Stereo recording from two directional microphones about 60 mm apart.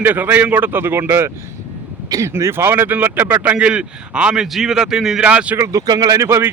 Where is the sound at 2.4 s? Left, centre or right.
Right; by 5.2 s centre.